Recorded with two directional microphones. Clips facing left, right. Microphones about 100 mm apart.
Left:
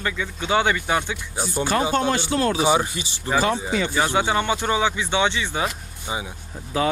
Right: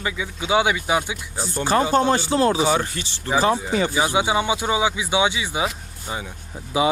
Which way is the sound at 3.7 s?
40° right (ahead or behind).